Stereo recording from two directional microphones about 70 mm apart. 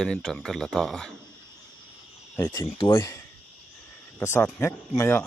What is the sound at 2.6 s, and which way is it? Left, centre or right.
Speech, left.